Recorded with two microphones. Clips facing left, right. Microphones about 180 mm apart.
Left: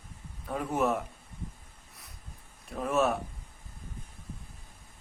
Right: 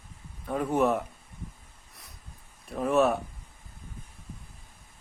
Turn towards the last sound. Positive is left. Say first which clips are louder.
# right 4 dB
turn(degrees=0)  # may be behind; listen again after turning